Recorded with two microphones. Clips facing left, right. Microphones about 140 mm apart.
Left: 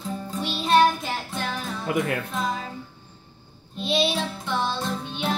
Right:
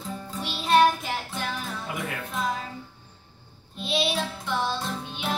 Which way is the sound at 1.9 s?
65° left (ahead or behind).